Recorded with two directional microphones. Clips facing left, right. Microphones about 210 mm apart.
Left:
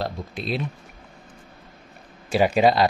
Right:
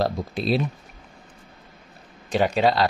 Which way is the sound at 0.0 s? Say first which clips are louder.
Right 5 dB; 35° right (ahead or behind).